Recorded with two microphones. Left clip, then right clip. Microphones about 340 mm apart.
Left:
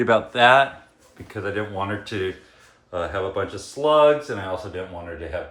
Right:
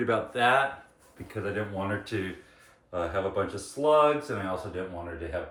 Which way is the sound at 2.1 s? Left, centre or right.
Left.